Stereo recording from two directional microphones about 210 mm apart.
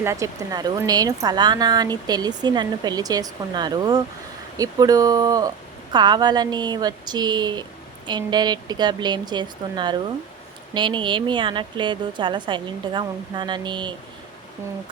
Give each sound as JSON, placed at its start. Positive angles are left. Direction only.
{"t": 0.0, "sound": "speech", "side_deg": -15}